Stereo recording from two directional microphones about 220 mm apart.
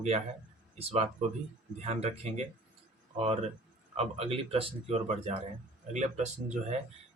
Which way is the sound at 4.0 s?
30° right (ahead or behind).